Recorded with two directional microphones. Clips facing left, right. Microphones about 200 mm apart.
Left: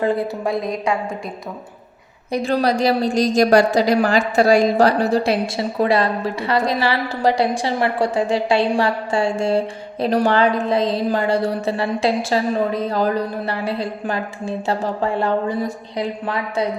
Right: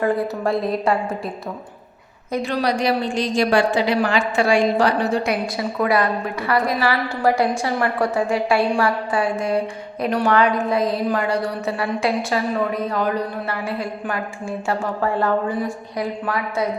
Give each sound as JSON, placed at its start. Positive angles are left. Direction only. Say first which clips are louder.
{"t": 0.4, "sound": "a woman's voice", "louder": "right 3 dB", "side_deg": 0}
{"t": 2.4, "sound": "a woman's voice", "louder": "left 3 dB", "side_deg": 40}
{"t": 7.5, "sound": "a woman's voice", "louder": "left 1 dB", "side_deg": 30}
{"t": 16.2, "sound": "a woman's voice", "louder": "even", "side_deg": 25}